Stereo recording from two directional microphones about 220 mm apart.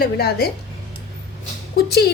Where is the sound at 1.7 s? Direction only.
45° left (ahead or behind).